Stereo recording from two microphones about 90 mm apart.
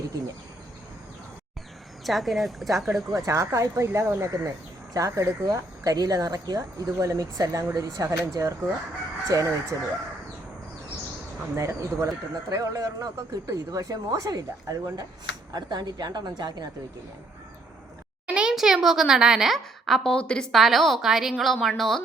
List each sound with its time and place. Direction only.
2.0 s speech: centre (ahead or behind)
3.2 s speech: 35° right (ahead or behind)
11.5 s speech: 35° right (ahead or behind); by 16.6 s 50° right (ahead or behind)
18.3 s speech: 10° right (ahead or behind)